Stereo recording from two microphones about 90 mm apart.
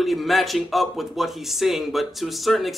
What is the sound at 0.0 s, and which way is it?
Speech, centre (ahead or behind).